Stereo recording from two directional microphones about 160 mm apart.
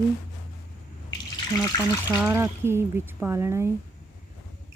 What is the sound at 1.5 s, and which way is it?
Speech, 20° left (ahead or behind).